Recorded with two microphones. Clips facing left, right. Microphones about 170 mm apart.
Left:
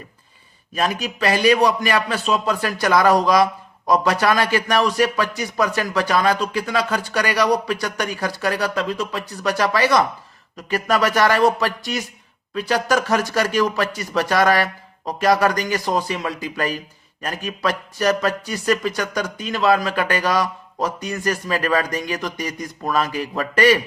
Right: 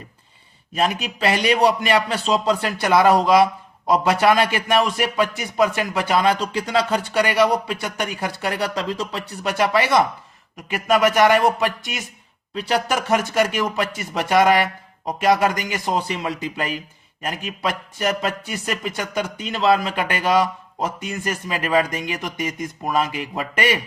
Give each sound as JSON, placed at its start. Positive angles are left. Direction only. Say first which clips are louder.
{"t": 0.7, "sound": "a man's voice", "louder": "even", "side_deg": -25}